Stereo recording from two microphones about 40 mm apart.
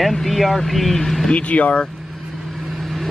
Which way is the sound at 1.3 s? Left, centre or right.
Left.